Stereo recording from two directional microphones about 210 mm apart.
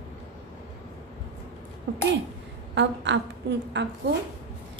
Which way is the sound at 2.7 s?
55° right (ahead or behind).